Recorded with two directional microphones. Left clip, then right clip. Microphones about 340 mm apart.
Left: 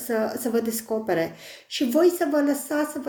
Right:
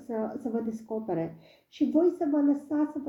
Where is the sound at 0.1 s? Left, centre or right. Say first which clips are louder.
Left 8 dB; left.